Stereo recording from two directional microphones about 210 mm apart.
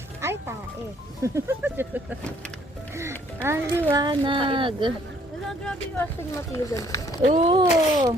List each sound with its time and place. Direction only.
0.2 s music: 10° right (ahead or behind)
1.2 s speech: 15° right (ahead or behind)
3.4 s speech: 10° right (ahead or behind)
4.0 s speech: 25° right (ahead or behind)
5.6 s speech: 10° left (ahead or behind)
7.2 s speech: 30° right (ahead or behind)